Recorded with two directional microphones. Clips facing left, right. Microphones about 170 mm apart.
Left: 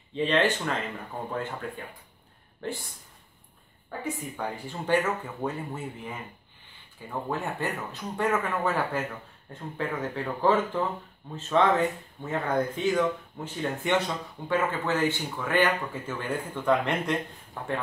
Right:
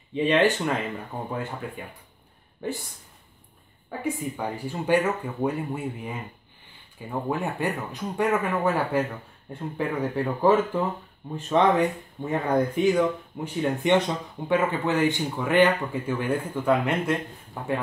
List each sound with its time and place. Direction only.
0.1 s speech: 10° right (ahead or behind)
2.6 s speech: 10° right (ahead or behind)
4.4 s speech: 10° right (ahead or behind)